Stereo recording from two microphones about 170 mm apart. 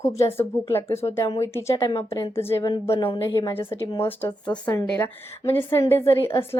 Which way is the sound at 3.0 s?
30° left (ahead or behind).